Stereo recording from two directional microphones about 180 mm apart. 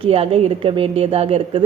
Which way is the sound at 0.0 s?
30° right (ahead or behind).